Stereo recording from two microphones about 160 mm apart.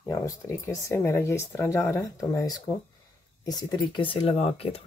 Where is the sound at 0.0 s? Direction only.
20° left (ahead or behind).